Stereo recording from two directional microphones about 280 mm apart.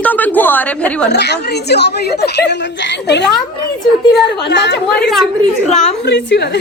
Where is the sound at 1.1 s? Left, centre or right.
Left.